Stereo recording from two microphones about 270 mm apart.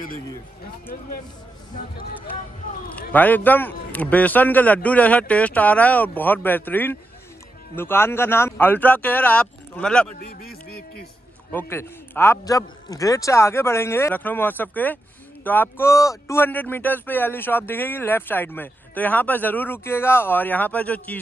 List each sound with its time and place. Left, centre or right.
3.0 s a man's voice: centre
10.2 s speech: left
11.5 s speech: centre